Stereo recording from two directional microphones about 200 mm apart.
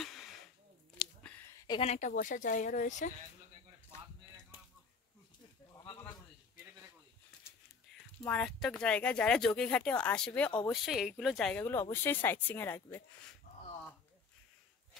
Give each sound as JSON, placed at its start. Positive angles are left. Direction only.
{"t": 0.0, "sound": "a sound", "side_deg": 0}
{"t": 1.8, "sound": "speech", "side_deg": 35}
{"t": 8.3, "sound": "speech", "side_deg": 5}